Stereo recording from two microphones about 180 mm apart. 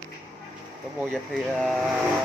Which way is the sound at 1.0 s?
Centre (ahead or behind).